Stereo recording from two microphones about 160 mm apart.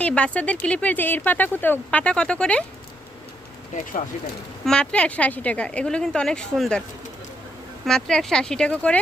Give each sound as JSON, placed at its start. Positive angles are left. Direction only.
{"t": 0.0, "sound": "speech", "side_deg": 5}
{"t": 4.6, "sound": "speech", "side_deg": 5}
{"t": 7.9, "sound": "speech", "side_deg": 5}